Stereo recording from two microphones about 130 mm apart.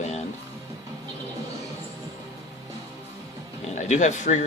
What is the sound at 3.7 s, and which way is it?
Speech, 65° left (ahead or behind).